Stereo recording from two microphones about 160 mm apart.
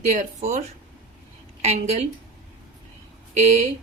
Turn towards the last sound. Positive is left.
turn(degrees=-45)  # may be behind; listen again after turning